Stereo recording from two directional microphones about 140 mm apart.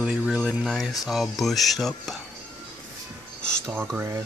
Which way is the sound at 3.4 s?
5° left (ahead or behind).